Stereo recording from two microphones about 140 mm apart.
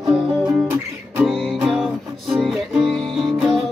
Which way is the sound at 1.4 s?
Centre (ahead or behind).